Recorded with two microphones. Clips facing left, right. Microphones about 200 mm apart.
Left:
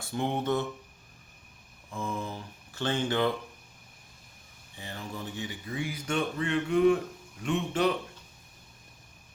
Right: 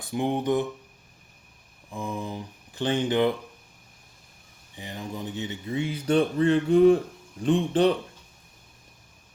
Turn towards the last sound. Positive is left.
turn(degrees=-30)  # may be behind; listen again after turning